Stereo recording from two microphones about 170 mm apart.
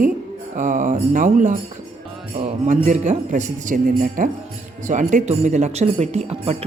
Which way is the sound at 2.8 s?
45° right (ahead or behind).